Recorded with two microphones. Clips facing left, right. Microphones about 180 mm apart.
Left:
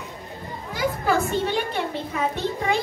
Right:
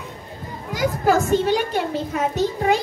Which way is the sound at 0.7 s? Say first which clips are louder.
Right 4 dB; 40° right (ahead or behind).